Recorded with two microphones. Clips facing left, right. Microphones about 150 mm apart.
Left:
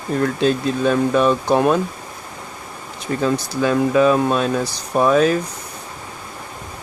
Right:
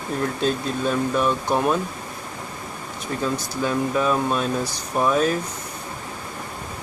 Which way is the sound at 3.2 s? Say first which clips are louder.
Left 6 dB; 80° left.